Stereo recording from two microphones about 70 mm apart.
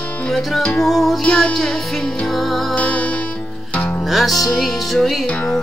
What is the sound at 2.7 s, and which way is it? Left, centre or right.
Music, centre.